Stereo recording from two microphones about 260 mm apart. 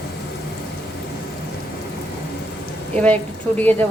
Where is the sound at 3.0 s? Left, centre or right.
Centre.